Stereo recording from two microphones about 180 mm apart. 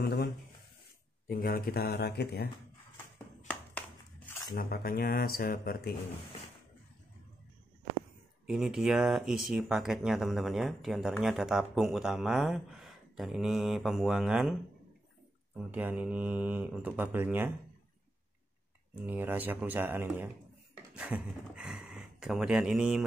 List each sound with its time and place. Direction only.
0.0 s a sound: 60° left (ahead or behind)
1.2 s speech: 55° left (ahead or behind)
4.6 s speech: 55° left (ahead or behind)
8.5 s speech: centre (ahead or behind)
18.9 s speech: 10° right (ahead or behind)